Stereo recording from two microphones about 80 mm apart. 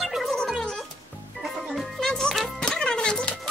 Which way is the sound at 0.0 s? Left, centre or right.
Centre.